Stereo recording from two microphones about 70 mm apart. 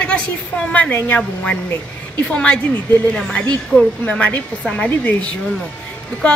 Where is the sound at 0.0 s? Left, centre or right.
Centre.